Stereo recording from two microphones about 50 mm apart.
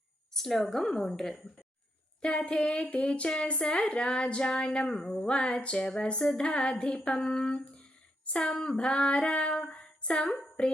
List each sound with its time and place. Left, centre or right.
0.3 s a woman's voice: centre
2.2 s speech: left
8.2 s female singing: left